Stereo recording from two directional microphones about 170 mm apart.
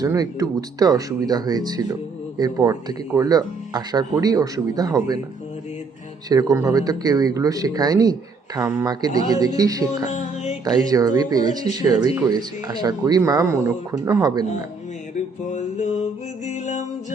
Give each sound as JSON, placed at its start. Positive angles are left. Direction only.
{"t": 0.0, "sound": "speech", "side_deg": -20}
{"t": 6.2, "sound": "speech", "side_deg": -20}
{"t": 15.4, "sound": "mantra", "side_deg": 45}
{"t": 16.5, "sound": "music", "side_deg": 45}